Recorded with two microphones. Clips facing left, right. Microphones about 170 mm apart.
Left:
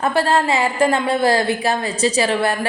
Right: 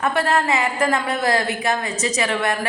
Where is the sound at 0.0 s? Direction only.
30° left (ahead or behind).